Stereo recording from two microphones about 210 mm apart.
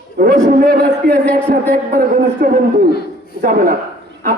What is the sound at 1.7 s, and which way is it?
A man's voice, 40° right (ahead or behind).